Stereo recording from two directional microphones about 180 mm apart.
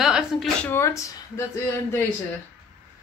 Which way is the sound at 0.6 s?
15° left (ahead or behind).